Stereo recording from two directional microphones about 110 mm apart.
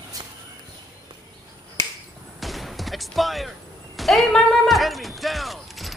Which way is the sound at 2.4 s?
Centre (ahead or behind).